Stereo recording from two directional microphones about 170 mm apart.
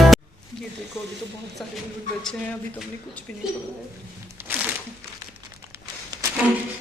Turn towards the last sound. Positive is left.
turn(degrees=-20)  # may be behind; listen again after turning